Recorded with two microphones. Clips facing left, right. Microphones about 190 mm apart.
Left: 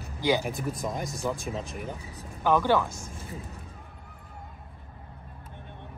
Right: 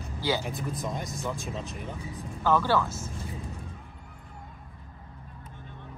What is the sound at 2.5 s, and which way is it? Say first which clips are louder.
Speech: left 1 dB; 15° left (ahead or behind).